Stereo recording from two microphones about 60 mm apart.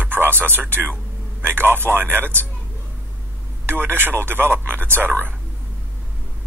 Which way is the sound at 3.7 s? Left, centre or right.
Right.